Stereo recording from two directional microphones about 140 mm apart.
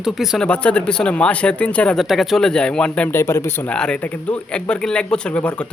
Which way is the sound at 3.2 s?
20° left (ahead or behind).